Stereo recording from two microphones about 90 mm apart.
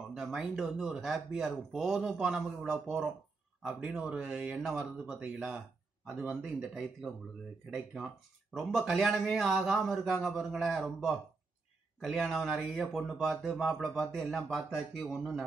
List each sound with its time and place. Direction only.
0.1 s speech: 5° right (ahead or behind)
6.4 s speech: 5° right (ahead or behind)